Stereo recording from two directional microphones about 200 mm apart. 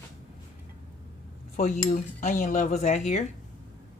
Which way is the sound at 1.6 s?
40° left (ahead or behind).